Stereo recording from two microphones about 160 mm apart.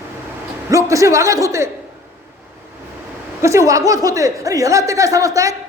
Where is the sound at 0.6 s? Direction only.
20° right (ahead or behind).